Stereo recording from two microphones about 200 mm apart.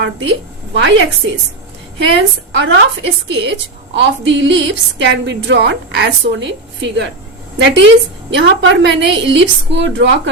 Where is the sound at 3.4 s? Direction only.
60° right (ahead or behind).